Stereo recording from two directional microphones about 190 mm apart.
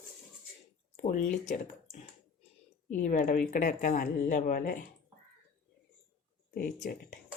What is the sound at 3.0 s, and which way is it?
Speech, 45° left (ahead or behind).